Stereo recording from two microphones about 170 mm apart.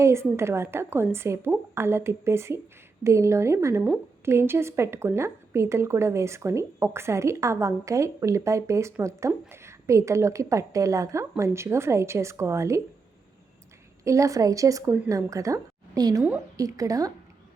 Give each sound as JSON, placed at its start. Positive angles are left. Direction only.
{"t": 0.0, "sound": "a woman's voice", "side_deg": -15}
{"t": 14.0, "sound": "speech", "side_deg": -20}